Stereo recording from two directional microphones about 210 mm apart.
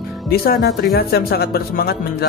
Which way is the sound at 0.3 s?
50° left (ahead or behind).